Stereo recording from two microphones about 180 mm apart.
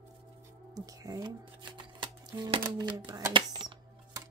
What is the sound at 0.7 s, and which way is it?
Shuffling cards, 20° right (ahead or behind).